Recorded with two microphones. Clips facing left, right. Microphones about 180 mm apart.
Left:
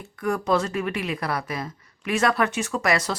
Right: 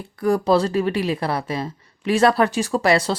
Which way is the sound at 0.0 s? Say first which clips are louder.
Right 6 dB; 35° right (ahead or behind).